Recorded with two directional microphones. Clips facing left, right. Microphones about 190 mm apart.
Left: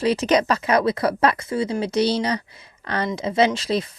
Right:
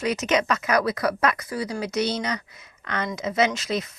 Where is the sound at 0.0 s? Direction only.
30° left (ahead or behind).